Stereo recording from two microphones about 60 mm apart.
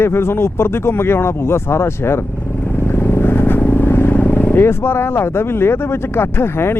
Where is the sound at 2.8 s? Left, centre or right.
Left.